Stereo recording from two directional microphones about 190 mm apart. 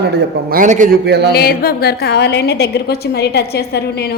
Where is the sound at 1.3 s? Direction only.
55° left (ahead or behind).